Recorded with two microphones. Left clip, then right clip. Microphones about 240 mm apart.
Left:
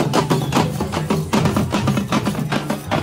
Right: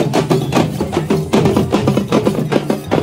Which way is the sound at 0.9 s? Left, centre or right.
Centre.